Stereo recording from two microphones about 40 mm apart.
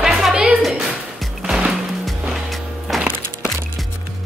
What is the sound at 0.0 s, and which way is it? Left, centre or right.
Music, centre.